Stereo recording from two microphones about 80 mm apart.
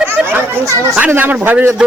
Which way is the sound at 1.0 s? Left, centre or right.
Right.